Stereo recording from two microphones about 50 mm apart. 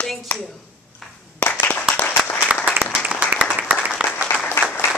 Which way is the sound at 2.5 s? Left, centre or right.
Right.